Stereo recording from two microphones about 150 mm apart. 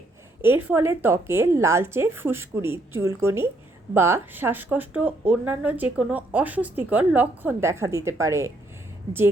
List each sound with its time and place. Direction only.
0.4 s speech: 15° right (ahead or behind)